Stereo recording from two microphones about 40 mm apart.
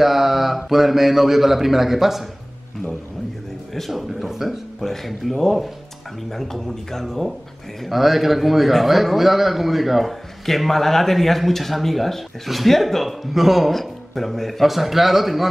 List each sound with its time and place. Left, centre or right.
0.0 s speech: centre
3.7 s speech: centre
7.8 s speech: centre